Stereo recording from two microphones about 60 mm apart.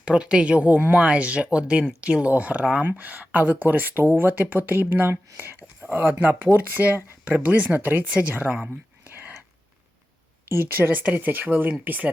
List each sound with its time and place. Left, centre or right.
0.0 s speech: centre
9.0 s whispering: right
10.5 s speech: right